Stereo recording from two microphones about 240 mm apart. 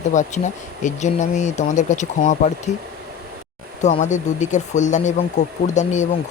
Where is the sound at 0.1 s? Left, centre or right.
Left.